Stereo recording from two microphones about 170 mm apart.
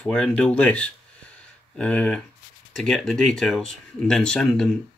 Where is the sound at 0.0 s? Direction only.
5° left (ahead or behind).